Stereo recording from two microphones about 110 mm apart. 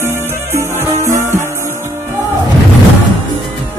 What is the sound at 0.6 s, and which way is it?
Music, 25° right (ahead or behind).